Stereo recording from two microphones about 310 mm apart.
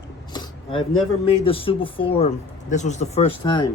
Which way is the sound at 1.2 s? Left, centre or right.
Centre.